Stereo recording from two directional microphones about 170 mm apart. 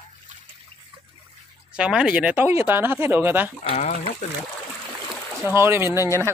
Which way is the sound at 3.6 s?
40° left (ahead or behind).